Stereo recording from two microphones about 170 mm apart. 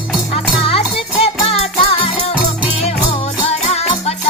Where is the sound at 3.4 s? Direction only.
40° left (ahead or behind).